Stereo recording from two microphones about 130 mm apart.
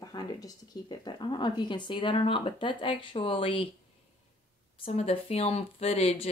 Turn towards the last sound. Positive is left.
turn(degrees=50)  # may be behind; listen again after turning